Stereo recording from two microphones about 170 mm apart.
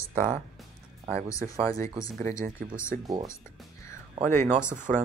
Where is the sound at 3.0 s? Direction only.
20° right (ahead or behind).